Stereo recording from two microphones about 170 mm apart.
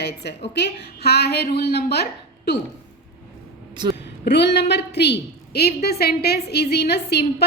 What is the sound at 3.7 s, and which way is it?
Speech, 25° right (ahead or behind).